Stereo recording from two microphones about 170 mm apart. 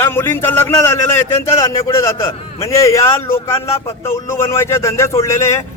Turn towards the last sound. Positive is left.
turn(degrees=15)  # may be behind; listen again after turning